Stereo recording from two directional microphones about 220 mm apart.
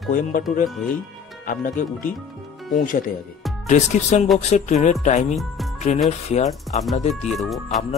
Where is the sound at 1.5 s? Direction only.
35° left (ahead or behind).